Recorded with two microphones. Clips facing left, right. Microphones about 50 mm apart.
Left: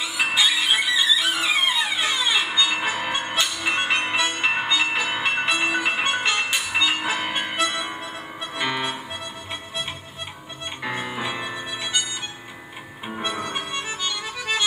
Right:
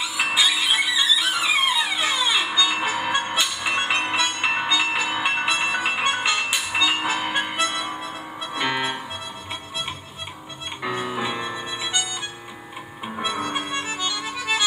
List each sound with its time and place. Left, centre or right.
0.2 s music: centre
3.7 s music: centre
4.0 s music: centre
8.5 s music: centre
10.9 s music: left
13.2 s harmonica: centre
14.2 s accordion: centre